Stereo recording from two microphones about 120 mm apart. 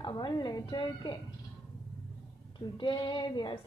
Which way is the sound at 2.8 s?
40° left (ahead or behind).